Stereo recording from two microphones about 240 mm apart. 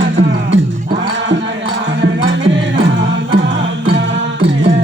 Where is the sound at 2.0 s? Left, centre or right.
Right.